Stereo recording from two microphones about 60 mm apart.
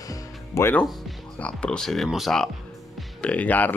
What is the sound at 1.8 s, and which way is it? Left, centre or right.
Speech, centre.